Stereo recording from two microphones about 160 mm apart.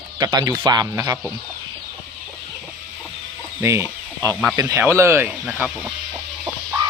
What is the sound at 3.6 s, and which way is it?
Speech, 15° right (ahead or behind).